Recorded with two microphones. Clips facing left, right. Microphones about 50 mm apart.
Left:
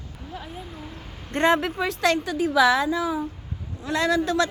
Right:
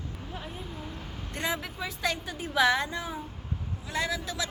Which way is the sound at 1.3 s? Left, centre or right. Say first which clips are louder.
Left 12 dB; left.